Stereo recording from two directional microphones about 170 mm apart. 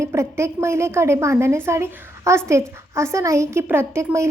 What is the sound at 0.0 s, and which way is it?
A woman's voice, 15° right (ahead or behind).